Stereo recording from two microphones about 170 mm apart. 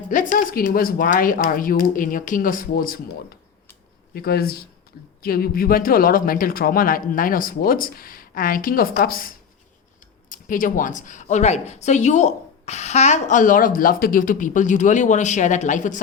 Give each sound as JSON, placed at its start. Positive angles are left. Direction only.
{"t": 0.1, "sound": "speech", "side_deg": 50}
{"t": 4.1, "sound": "speech", "side_deg": 65}